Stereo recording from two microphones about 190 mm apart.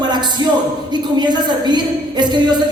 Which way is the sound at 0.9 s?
25° right (ahead or behind).